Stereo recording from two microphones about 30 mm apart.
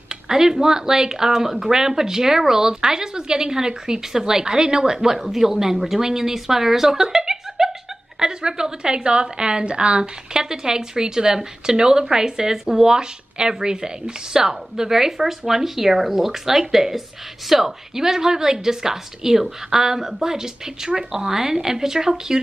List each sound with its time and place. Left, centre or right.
0.1 s a woman's voice: right
10.3 s speech: right